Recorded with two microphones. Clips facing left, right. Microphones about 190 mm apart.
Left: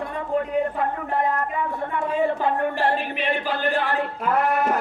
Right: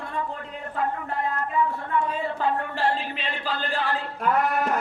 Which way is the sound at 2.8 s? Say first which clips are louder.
Left 4 dB; 55° left (ahead or behind).